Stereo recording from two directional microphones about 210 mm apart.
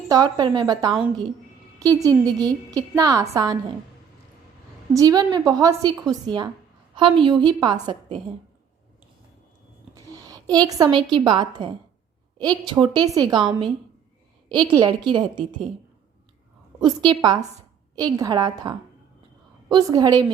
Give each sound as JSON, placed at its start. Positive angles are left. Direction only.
{"t": 0.1, "sound": "a woman's voice", "side_deg": -20}
{"t": 4.9, "sound": "a woman's voice", "side_deg": -20}
{"t": 9.9, "sound": "a sound", "side_deg": -15}
{"t": 11.1, "sound": "a woman's voice", "side_deg": -20}
{"t": 14.5, "sound": "a woman's voice", "side_deg": -20}
{"t": 16.8, "sound": "a woman's voice", "side_deg": -20}